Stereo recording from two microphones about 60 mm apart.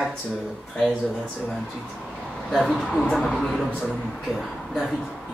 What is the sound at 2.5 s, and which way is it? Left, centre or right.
Speech, centre.